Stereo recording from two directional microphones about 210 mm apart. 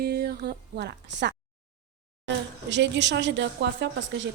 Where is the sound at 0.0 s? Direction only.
50° right (ahead or behind).